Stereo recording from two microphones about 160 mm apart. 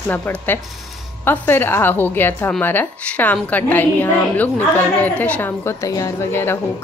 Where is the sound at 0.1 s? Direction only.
10° left (ahead or behind).